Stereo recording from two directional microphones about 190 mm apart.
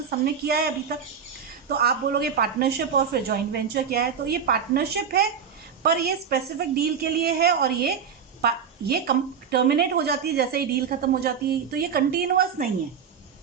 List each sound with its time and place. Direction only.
0.4 s a woman's voice: 55° right (ahead or behind)
1.7 s a woman's voice: 55° right (ahead or behind)